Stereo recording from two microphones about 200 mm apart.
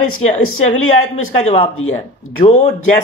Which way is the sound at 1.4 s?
35° left (ahead or behind).